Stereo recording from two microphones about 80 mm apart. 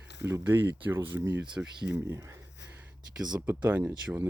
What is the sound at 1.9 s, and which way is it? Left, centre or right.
Speech, right.